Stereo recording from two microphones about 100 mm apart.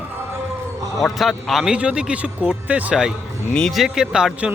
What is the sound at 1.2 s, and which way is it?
Speech, centre (ahead or behind).